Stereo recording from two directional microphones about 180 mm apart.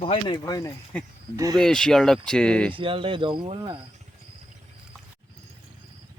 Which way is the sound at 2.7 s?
30° right (ahead or behind).